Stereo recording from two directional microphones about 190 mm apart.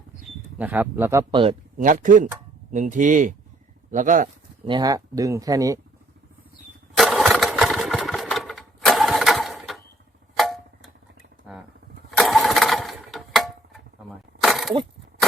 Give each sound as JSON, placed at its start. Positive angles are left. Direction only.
{"t": 0.6, "sound": "speech", "side_deg": -10}
{"t": 1.3, "sound": "speech", "side_deg": -25}
{"t": 1.8, "sound": "speech", "side_deg": -45}
{"t": 4.6, "sound": "speech", "side_deg": -20}
{"t": 6.9, "sound": "engine", "side_deg": 0}
{"t": 10.3, "sound": "tick-tock", "side_deg": 0}
{"t": 12.1, "sound": "lawn mower", "side_deg": 0}
{"t": 14.4, "sound": "a sound", "side_deg": 0}